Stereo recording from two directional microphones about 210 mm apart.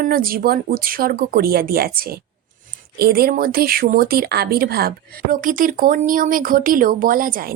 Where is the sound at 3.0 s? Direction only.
45° right (ahead or behind).